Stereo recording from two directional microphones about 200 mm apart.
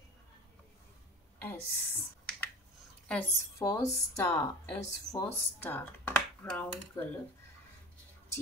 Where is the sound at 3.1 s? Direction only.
10° left (ahead or behind).